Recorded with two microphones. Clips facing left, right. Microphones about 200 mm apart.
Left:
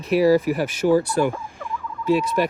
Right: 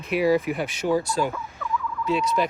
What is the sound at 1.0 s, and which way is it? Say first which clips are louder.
Speech: left 4 dB; 60° left (ahead or behind).